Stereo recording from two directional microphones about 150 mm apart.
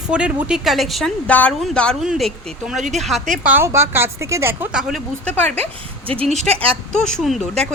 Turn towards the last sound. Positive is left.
turn(degrees=0)  # may be behind; listen again after turning